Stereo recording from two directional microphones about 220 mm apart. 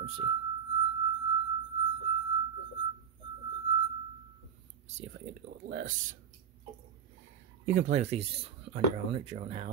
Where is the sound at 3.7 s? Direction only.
25° right (ahead or behind).